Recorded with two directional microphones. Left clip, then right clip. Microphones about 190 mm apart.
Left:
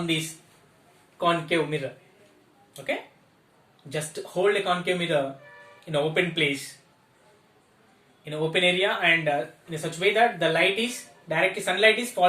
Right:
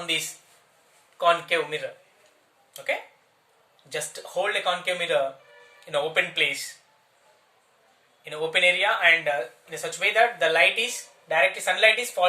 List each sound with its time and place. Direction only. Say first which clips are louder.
1.2 s speech: right 2 dB; 10° right (ahead or behind)
3.8 s speech: even; 10° right (ahead or behind)
8.2 s speech: right 2 dB; 15° right (ahead or behind)